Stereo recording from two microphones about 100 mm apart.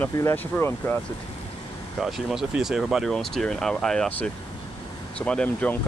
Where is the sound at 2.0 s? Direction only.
5° right (ahead or behind).